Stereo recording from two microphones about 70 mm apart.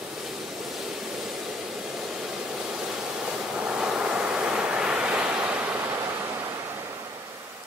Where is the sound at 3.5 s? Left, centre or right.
Centre.